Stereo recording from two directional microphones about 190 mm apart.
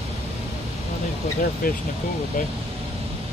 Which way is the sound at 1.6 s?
50° left (ahead or behind).